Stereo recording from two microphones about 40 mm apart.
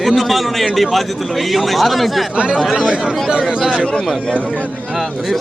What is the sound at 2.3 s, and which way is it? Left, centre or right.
Speech, right.